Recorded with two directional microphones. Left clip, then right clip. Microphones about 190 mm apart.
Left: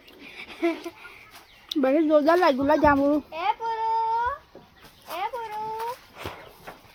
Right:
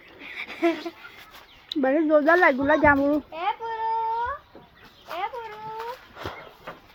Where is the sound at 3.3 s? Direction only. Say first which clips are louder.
Left 2 dB; 70° left (ahead or behind).